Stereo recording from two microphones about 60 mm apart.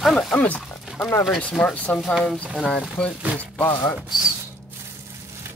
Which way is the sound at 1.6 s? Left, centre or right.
Left.